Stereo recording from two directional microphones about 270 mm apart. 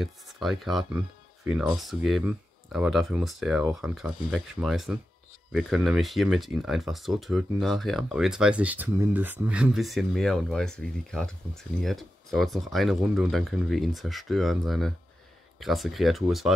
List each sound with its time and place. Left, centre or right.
0.0 s speech: centre